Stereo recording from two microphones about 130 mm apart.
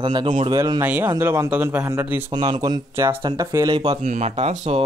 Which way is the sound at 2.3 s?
35° right (ahead or behind).